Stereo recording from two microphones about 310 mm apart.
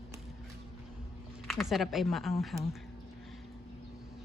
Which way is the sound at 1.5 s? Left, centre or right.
Centre.